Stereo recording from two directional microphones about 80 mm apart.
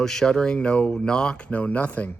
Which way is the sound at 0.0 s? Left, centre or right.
Centre.